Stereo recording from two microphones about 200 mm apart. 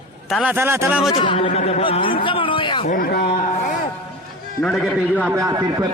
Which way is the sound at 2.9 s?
50° left (ahead or behind).